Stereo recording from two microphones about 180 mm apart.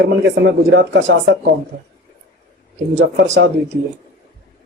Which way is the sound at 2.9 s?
75° right (ahead or behind).